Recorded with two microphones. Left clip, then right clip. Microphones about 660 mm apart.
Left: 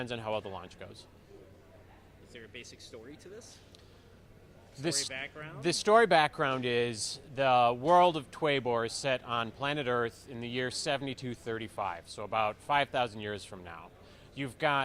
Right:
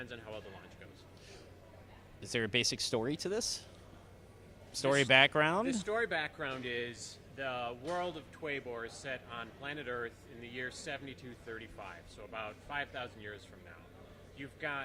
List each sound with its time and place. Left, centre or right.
0.0 s speech: left
2.3 s speech: right
4.9 s speech: right
5.6 s speech: left